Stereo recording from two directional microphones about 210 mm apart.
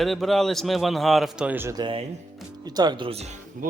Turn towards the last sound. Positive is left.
turn(degrees=-30)  # may be behind; listen again after turning